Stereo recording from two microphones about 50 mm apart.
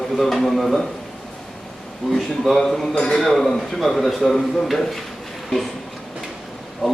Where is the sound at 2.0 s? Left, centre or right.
Centre.